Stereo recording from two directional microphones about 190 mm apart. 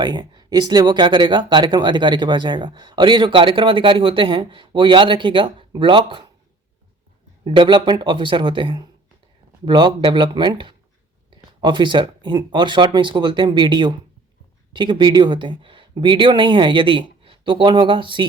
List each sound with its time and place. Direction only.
0.0 s speech: 20° right (ahead or behind)
7.4 s speech: 25° right (ahead or behind)